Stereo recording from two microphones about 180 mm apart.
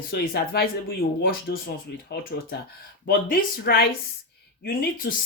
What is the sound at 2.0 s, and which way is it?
Speech, 60° left (ahead or behind).